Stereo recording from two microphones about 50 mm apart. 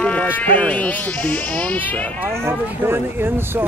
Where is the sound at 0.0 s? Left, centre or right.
Left.